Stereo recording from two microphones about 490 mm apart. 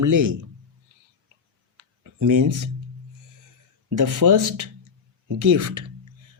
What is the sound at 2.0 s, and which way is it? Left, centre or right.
Speech, right.